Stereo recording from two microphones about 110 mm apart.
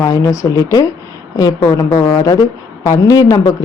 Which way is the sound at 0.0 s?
30° left (ahead or behind).